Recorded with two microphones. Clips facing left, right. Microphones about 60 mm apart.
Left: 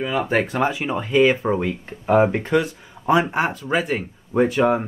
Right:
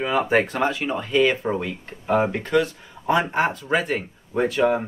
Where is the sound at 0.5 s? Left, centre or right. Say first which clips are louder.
Left 1 dB; centre.